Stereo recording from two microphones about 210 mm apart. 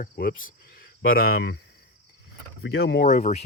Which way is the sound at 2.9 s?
40° left (ahead or behind).